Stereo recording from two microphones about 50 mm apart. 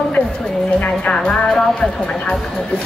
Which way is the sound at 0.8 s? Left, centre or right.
Left.